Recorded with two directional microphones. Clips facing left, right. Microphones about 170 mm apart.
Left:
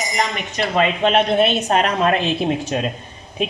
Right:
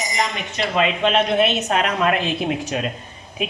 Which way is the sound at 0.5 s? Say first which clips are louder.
Left 2 dB; 40° left (ahead or behind).